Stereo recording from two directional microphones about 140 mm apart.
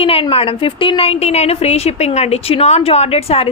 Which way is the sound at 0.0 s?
40° left (ahead or behind).